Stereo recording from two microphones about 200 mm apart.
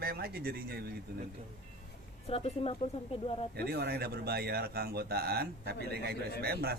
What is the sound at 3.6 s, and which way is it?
Speech, 55° right (ahead or behind).